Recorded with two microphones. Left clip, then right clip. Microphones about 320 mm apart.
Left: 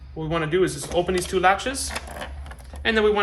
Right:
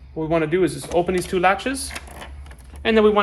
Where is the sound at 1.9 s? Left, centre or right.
Centre.